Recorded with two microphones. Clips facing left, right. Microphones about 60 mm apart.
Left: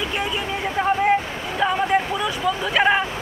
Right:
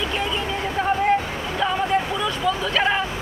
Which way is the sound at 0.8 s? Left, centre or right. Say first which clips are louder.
Left 2 dB; centre.